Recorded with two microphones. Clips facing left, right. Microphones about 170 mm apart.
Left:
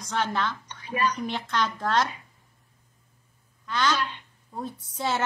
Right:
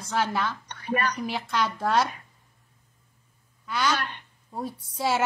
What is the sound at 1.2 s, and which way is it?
Speech, 10° right (ahead or behind).